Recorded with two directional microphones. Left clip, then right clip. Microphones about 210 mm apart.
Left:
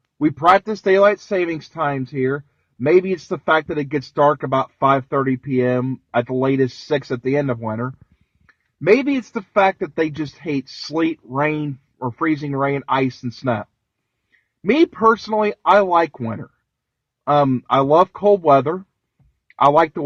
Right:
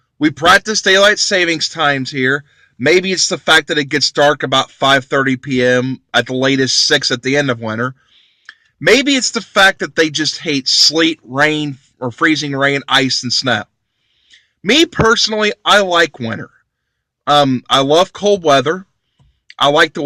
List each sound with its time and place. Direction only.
0.2 s speech: 20° right (ahead or behind)
8.9 s speech: 20° right (ahead or behind)